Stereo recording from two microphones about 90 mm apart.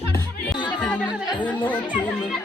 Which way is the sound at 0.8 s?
15° left (ahead or behind).